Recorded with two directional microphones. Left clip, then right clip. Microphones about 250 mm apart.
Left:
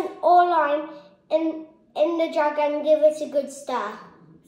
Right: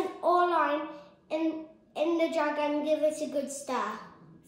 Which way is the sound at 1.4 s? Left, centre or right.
Centre.